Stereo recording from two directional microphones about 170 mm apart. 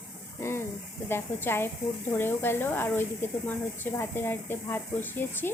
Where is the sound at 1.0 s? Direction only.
15° left (ahead or behind).